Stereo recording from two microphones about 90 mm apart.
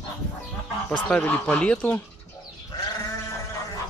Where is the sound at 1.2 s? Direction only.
15° left (ahead or behind).